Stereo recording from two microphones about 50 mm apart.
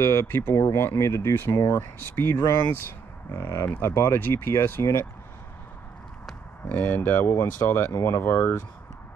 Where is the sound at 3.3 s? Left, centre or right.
Left.